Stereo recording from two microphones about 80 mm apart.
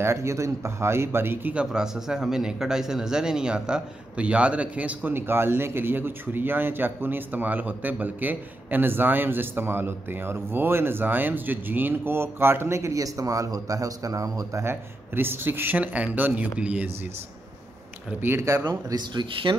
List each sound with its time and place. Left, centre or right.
0.0 s speech: right
1.5 s a man's voice: centre; by 14.6 s right
14.6 s a man's voice: right
18.1 s a man's voice: right
18.6 s speech: right